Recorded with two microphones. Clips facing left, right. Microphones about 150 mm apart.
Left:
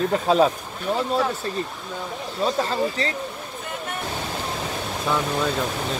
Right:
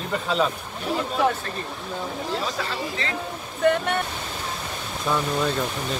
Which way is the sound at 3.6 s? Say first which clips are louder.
Right 13 dB; 70° right (ahead or behind).